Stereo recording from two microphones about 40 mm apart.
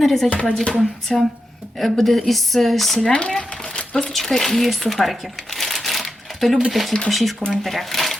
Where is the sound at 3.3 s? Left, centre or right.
Centre.